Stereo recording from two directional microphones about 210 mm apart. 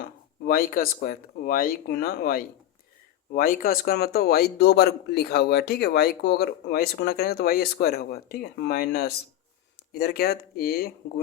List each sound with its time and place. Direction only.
0.0 s a man's voice: 45° left (ahead or behind)